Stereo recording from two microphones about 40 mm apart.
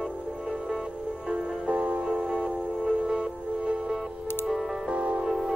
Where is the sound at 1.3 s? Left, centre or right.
Right.